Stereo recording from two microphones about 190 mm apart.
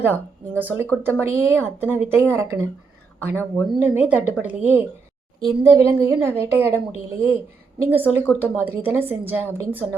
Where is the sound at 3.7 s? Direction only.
10° right (ahead or behind).